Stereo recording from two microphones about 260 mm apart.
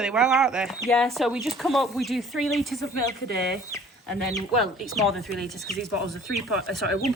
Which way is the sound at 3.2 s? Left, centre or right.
Right.